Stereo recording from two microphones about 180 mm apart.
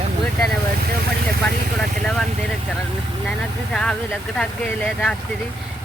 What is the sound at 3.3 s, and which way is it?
Speech, 5° left (ahead or behind).